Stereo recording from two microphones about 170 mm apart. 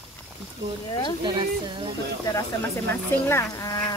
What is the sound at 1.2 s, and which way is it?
Speech, 25° right (ahead or behind).